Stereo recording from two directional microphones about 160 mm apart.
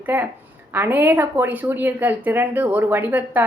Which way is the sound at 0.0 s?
10° right (ahead or behind).